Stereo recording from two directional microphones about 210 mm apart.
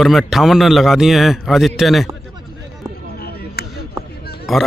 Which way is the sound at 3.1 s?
50° left (ahead or behind).